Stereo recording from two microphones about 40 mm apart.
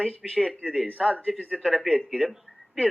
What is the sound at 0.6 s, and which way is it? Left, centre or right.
Speech, right.